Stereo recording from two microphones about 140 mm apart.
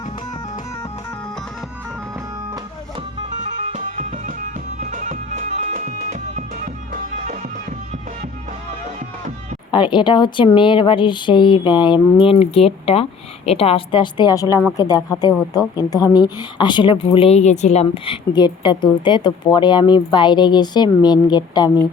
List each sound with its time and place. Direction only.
3.7 s music: 65° right (ahead or behind)
5.5 s music: 55° right (ahead or behind)
9.7 s a woman's voice: 35° left (ahead or behind)